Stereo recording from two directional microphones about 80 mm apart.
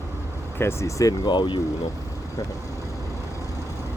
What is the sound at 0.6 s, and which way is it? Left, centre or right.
Speech, left.